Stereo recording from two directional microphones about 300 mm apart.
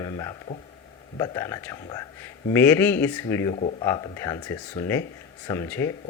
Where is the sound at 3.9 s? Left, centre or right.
Centre.